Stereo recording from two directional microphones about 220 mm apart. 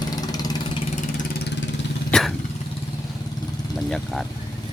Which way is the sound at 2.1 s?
5° left (ahead or behind).